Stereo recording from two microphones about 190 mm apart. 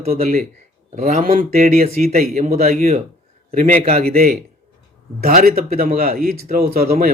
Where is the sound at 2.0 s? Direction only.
35° right (ahead or behind).